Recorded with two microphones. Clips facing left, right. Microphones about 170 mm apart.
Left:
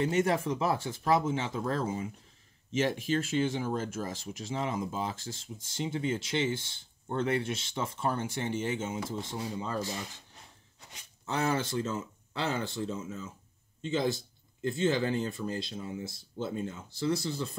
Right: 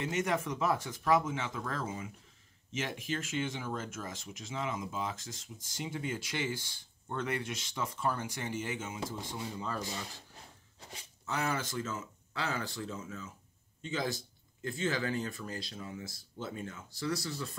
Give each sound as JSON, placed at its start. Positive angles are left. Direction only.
{"t": 0.0, "sound": "speech", "side_deg": 30}
{"t": 11.2, "sound": "speech", "side_deg": 30}